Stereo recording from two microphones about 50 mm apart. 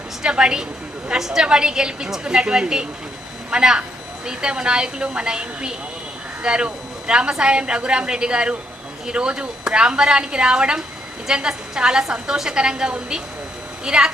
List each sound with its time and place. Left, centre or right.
0.2 s a woman's voice: centre